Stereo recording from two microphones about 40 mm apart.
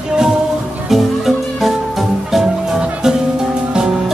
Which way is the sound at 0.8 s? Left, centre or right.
Centre.